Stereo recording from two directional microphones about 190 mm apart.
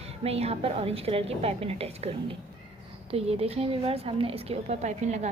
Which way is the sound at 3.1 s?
30° right (ahead or behind).